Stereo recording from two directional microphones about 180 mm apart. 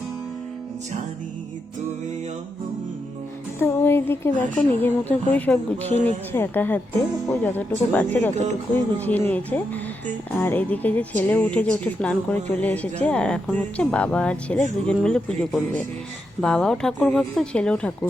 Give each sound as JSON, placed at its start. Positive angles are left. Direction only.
{"t": 3.6, "sound": "speech", "side_deg": 15}
{"t": 5.9, "sound": "speech", "side_deg": -35}
{"t": 6.3, "sound": "speech", "side_deg": 10}